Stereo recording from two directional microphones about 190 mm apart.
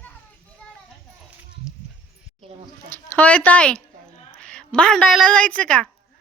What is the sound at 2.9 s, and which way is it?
A woman's voice, 10° left (ahead or behind).